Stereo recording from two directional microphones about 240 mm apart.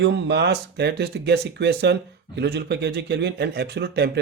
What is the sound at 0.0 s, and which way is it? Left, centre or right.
Speech, right.